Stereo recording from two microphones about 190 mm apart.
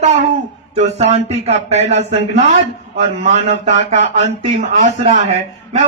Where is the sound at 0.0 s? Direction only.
35° right (ahead or behind).